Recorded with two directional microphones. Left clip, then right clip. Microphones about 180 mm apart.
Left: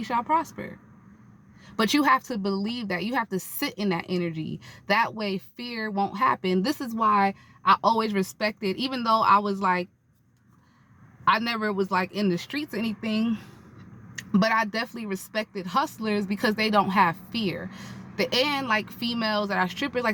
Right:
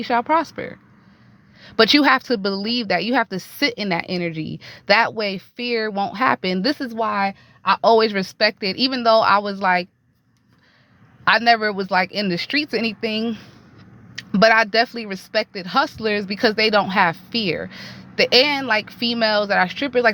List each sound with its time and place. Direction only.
0.0 s speech: 25° right (ahead or behind)
6.1 s speech: 25° right (ahead or behind)
11.3 s speech: 20° right (ahead or behind)